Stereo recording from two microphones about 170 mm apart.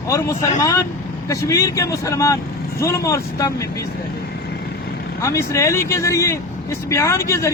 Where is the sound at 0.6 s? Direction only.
20° left (ahead or behind).